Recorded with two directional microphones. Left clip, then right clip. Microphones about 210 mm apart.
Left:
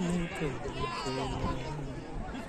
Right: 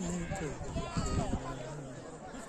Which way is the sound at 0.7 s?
60° right (ahead or behind).